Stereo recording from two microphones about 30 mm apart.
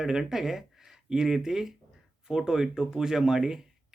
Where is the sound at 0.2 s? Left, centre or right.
Centre.